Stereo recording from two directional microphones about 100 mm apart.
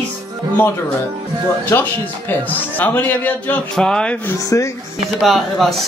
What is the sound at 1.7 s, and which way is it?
A man's voice, 20° left (ahead or behind).